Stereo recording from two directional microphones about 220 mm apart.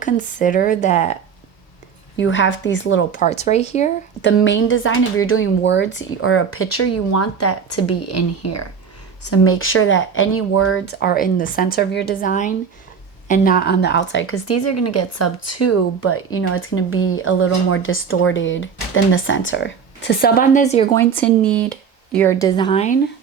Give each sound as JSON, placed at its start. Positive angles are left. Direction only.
{"t": 0.0, "sound": "a woman's voice", "side_deg": 35}
{"t": 2.2, "sound": "speech", "side_deg": 55}
{"t": 3.1, "sound": "a woman's voice", "side_deg": 35}
{"t": 4.2, "sound": "speech", "side_deg": 55}
{"t": 9.3, "sound": "speech", "side_deg": 75}
{"t": 10.8, "sound": "a woman's voice", "side_deg": 45}
{"t": 20.9, "sound": "speech", "side_deg": 10}